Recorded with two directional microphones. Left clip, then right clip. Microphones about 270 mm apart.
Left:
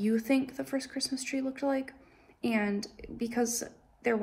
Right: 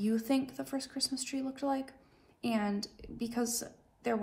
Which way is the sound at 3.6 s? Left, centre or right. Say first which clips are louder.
Left 4 dB; centre.